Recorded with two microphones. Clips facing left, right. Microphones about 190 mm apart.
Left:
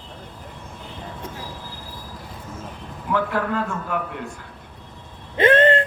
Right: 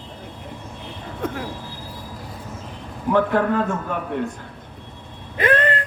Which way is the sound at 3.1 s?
20° right (ahead or behind).